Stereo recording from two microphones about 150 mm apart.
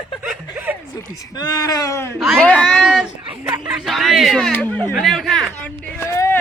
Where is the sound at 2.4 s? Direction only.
5° left (ahead or behind).